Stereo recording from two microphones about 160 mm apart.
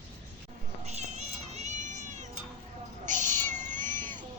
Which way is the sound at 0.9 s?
45° right (ahead or behind).